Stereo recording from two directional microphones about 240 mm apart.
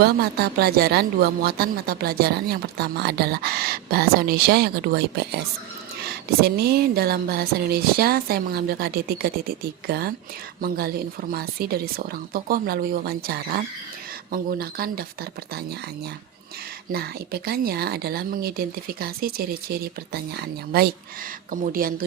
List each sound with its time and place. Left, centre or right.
0.0 s speech: right
16.9 s speech: right